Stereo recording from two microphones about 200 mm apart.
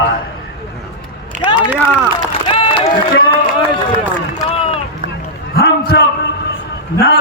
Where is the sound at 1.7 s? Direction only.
5° right (ahead or behind).